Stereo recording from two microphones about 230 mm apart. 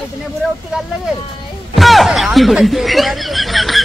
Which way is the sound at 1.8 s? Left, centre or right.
Centre.